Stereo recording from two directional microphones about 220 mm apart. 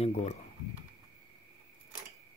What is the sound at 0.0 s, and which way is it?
Speech, 30° left (ahead or behind).